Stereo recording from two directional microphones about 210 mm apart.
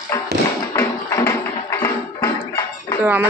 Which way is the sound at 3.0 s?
10° right (ahead or behind).